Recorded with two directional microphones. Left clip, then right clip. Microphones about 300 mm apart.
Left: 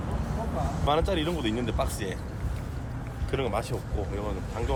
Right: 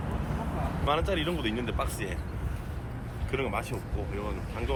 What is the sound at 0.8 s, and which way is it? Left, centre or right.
Speech, left.